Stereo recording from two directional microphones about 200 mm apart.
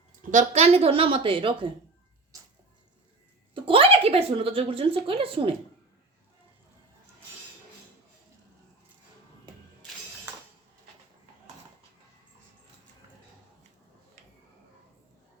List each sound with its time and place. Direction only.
0.2 s a woman's voice: 40° right (ahead or behind)
3.5 s a woman's voice: 25° right (ahead or behind)